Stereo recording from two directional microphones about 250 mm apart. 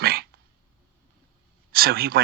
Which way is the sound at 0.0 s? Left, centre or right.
Right.